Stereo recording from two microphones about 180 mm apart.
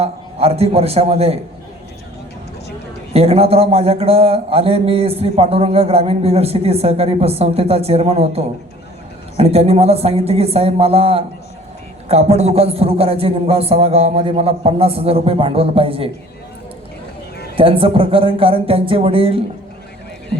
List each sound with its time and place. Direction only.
0.0 s a man's voice: 35° right (ahead or behind)
3.1 s a man's voice: 35° right (ahead or behind)
17.6 s a man's voice: 30° right (ahead or behind)